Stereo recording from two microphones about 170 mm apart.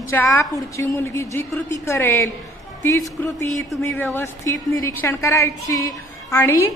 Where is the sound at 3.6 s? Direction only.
10° left (ahead or behind).